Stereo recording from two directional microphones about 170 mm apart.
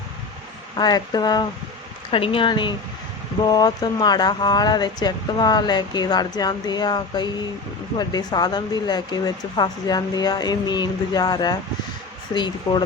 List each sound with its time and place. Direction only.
0.8 s speech: 25° left (ahead or behind)